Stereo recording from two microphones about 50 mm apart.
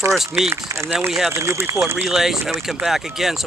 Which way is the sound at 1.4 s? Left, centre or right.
Right.